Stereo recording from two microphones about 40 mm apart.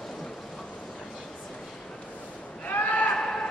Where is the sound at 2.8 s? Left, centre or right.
Left.